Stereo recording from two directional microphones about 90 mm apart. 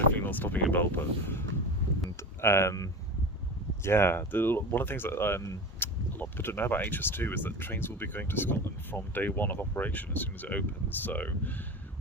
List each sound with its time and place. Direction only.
0.1 s speech: 20° left (ahead or behind)